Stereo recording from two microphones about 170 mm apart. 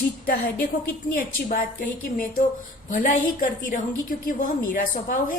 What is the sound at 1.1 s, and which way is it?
A woman's voice, 55° left (ahead or behind).